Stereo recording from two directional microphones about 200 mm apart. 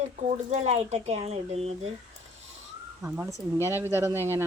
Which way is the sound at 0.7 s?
35° right (ahead or behind).